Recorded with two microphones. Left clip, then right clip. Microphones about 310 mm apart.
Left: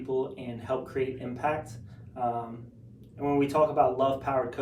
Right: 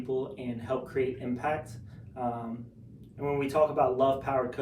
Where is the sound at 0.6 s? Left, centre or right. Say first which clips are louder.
Even; centre.